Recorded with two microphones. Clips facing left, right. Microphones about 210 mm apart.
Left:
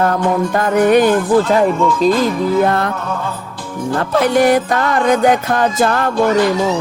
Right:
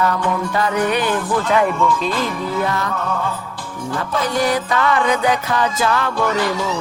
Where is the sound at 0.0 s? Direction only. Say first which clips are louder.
Left 5 dB; 50° left (ahead or behind).